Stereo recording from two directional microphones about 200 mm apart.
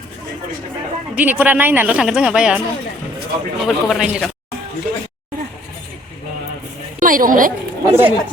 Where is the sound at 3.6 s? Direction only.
Centre (ahead or behind).